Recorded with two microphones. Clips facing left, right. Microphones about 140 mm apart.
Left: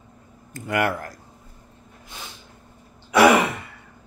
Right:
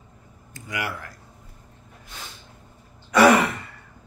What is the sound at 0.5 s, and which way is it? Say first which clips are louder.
Speech: left 8 dB; 55° left (ahead or behind).